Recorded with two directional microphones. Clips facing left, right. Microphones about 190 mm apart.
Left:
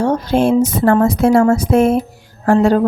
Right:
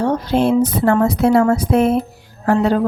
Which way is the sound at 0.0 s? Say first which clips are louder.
Left 2 dB; 45° left (ahead or behind).